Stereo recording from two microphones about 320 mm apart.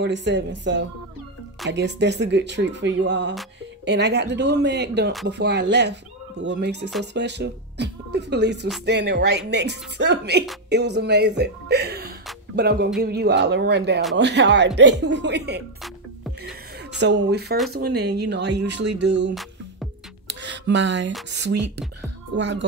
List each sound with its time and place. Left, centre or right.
0.0 s speech: right
15.8 s music: centre
17.0 s speech: right
20.2 s a sound: right
22.4 s speech: right